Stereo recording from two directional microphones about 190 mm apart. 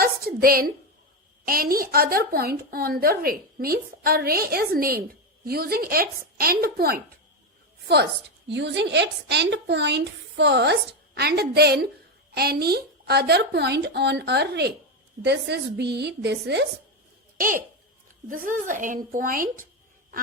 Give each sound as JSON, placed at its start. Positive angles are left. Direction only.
{"t": 0.0, "sound": "a woman's voice", "side_deg": -50}
{"t": 8.4, "sound": "a woman's voice", "side_deg": -65}
{"t": 17.3, "sound": "a child's voice", "side_deg": -45}